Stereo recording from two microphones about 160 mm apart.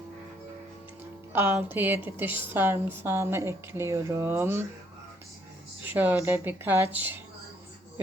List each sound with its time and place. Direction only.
1.3 s a woman's voice: 15° right (ahead or behind)
5.8 s a woman's voice: 10° right (ahead or behind)